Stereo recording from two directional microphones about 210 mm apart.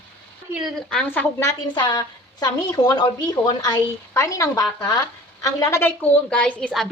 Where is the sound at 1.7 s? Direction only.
20° left (ahead or behind).